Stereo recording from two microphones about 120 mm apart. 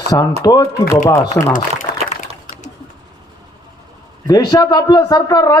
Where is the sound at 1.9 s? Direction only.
90° left.